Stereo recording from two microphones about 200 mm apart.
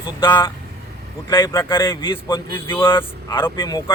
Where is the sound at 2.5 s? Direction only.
10° left (ahead or behind).